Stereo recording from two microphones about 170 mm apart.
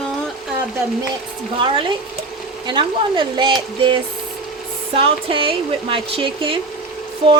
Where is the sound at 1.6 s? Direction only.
30° right (ahead or behind).